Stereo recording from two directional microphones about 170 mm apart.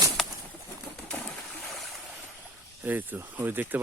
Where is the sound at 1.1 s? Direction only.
Centre (ahead or behind).